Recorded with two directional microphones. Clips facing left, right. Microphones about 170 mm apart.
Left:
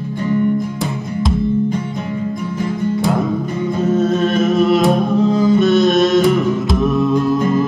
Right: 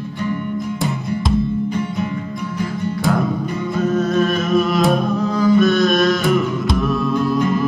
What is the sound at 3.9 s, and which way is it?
Music, 25° left (ahead or behind).